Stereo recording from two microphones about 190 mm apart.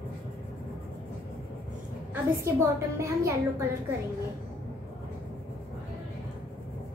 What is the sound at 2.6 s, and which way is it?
A woman's voice, 15° right (ahead or behind).